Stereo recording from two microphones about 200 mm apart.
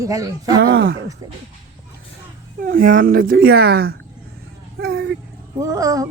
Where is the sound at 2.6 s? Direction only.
45° right (ahead or behind).